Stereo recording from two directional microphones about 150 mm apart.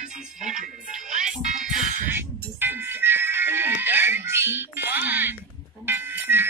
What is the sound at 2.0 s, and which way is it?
Music, 15° right (ahead or behind).